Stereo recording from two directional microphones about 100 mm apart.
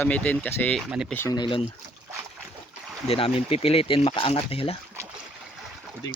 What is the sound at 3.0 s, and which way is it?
Speech, 70° left (ahead or behind).